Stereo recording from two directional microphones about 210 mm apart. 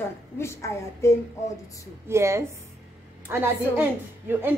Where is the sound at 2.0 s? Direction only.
15° right (ahead or behind).